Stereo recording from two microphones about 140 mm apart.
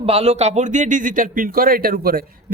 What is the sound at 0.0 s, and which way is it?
Speech, 45° right (ahead or behind).